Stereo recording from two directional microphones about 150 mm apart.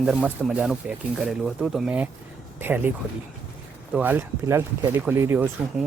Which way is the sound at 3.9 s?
10° right (ahead or behind).